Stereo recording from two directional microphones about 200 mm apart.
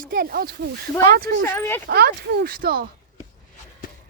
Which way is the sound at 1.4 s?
10° left (ahead or behind).